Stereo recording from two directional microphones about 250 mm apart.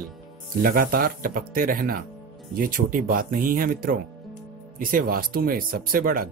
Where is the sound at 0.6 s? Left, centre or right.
Right.